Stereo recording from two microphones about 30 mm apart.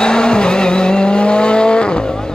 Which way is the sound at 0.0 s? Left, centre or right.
Left.